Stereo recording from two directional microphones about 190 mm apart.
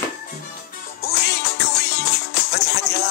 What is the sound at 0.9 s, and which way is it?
Music, 60° left (ahead or behind).